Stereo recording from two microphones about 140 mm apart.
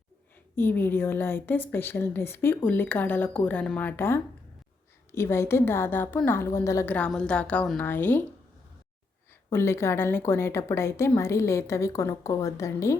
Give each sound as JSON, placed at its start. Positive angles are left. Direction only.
{"t": 0.5, "sound": "a woman's voice", "side_deg": 15}
{"t": 9.5, "sound": "a woman's voice", "side_deg": 20}